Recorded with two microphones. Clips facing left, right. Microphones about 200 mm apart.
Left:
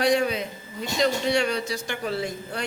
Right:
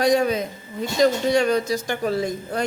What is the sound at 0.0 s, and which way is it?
A man's voice, 40° right (ahead or behind).